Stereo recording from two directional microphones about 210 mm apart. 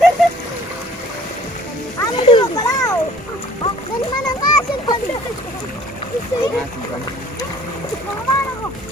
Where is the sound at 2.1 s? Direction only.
25° left (ahead or behind).